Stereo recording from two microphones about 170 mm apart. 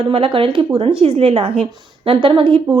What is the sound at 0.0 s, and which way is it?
A woman's voice, 35° right (ahead or behind).